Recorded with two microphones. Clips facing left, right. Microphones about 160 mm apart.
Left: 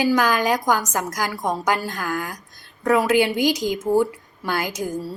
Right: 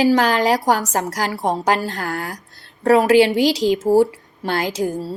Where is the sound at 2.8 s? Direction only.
70° right (ahead or behind).